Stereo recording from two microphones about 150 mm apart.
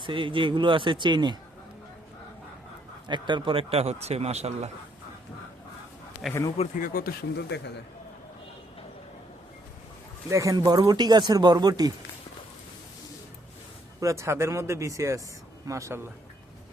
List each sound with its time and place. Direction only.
0.0 s speech: 35° right (ahead or behind)
3.1 s speech: 30° right (ahead or behind)
6.2 s a man's voice: centre (ahead or behind)
6.7 s speech: 70° left (ahead or behind); by 7.4 s 85° left
10.2 s speech: 20° right (ahead or behind)
14.0 s speech: 20° right (ahead or behind)